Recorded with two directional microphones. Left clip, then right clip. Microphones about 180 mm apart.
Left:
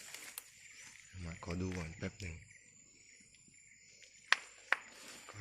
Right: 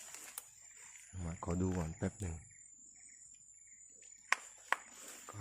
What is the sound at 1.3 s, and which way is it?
Cricket, 40° right (ahead or behind).